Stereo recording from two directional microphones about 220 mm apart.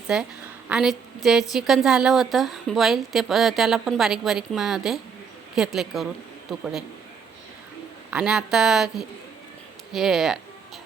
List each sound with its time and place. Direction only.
0.1 s a woman's voice: 5° right (ahead or behind)
8.1 s a woman's voice: 5° right (ahead or behind)